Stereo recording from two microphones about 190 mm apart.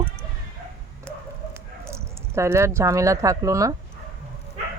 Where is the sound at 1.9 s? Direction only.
15° right (ahead or behind).